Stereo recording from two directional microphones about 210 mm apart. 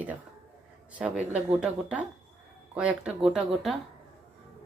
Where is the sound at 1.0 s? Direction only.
5° right (ahead or behind).